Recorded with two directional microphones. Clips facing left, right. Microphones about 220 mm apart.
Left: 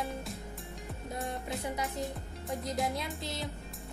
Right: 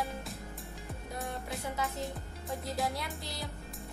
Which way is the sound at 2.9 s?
20° left (ahead or behind).